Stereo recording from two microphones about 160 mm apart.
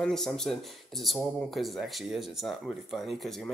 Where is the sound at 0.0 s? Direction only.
5° left (ahead or behind).